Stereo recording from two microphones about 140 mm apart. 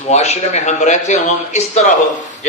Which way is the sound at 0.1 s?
50° left (ahead or behind).